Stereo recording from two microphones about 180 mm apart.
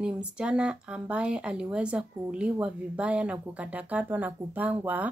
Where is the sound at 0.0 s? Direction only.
5° right (ahead or behind).